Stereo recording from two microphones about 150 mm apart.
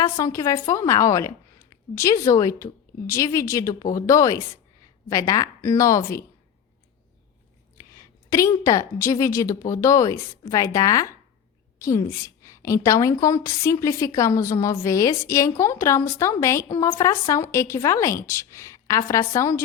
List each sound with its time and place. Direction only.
0.0 s a woman's voice: 20° left (ahead or behind)
8.3 s a woman's voice: 20° left (ahead or behind)